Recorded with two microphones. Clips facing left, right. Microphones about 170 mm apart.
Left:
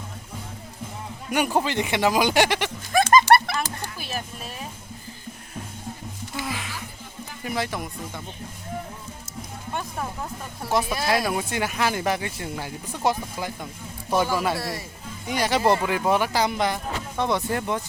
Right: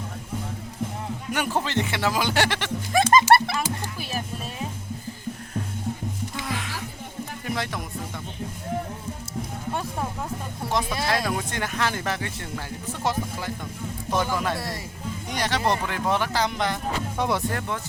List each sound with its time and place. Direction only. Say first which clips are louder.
1.3 s speech: left 3 dB; 15° left (ahead or behind)
2.9 s music: left 1 dB; 25° right (ahead or behind)
6.3 s music: even; 5° left (ahead or behind)
10.7 s speech: left 2 dB; 5° left (ahead or behind)
17.2 s speech: left 2 dB; 10° right (ahead or behind)
17.5 s speech: left 4 dB; 15° left (ahead or behind)